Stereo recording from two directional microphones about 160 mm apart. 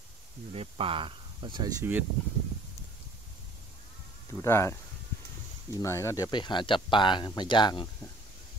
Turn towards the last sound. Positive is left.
turn(degrees=30)  # may be behind; listen again after turning